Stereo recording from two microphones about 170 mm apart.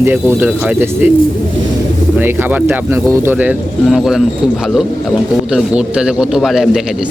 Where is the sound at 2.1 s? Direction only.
10° right (ahead or behind).